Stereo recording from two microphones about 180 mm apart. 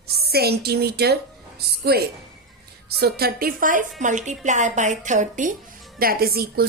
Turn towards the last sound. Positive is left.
turn(degrees=-60)  # may be behind; listen again after turning